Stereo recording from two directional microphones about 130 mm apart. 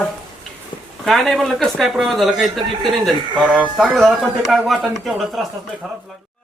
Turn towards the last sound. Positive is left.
turn(degrees=0)  # may be behind; listen again after turning